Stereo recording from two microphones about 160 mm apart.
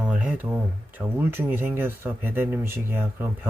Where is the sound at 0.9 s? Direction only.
15° right (ahead or behind).